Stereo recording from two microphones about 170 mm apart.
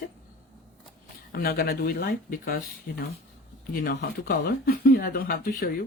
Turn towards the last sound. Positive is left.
turn(degrees=60)  # may be behind; listen again after turning